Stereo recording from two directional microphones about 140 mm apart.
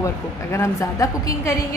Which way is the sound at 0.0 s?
20° left (ahead or behind).